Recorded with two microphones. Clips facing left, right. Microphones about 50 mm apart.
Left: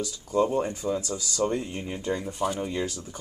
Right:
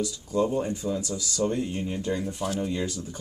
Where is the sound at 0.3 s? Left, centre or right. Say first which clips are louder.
Left 2 dB; left.